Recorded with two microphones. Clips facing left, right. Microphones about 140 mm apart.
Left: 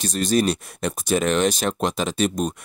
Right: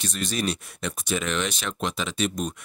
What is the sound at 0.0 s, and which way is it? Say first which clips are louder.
Speech: left 8 dB; 40° left (ahead or behind).